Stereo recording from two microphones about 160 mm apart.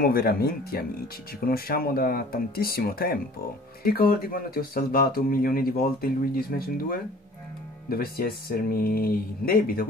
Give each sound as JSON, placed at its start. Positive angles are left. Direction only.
{"t": 0.0, "sound": "speech", "side_deg": 70}